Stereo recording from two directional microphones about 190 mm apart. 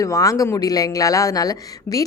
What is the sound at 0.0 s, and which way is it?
Speech, 15° left (ahead or behind).